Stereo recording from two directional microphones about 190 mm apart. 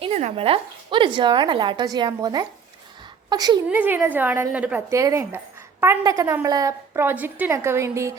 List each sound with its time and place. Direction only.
0.0 s a woman's voice: 35° right (ahead or behind); by 3.6 s 20° right (ahead or behind)
3.7 s a woman's voice: 10° right (ahead or behind)